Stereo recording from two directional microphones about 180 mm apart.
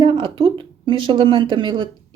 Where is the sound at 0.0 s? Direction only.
25° right (ahead or behind).